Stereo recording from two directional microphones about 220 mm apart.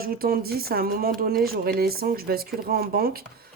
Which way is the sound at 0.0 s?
40° right (ahead or behind).